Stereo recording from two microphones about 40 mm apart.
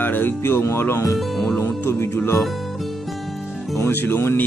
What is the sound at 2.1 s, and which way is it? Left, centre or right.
Speech, left.